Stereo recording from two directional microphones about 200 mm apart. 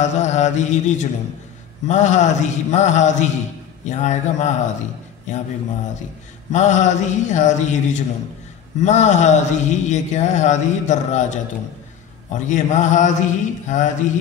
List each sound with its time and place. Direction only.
0.0 s speech: 35° left (ahead or behind)
6.5 s speech: 35° left (ahead or behind)